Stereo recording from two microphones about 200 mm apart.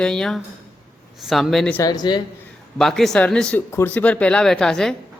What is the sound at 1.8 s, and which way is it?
Speech, 20° left (ahead or behind).